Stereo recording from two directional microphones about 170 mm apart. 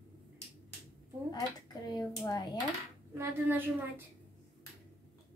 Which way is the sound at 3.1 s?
10° right (ahead or behind).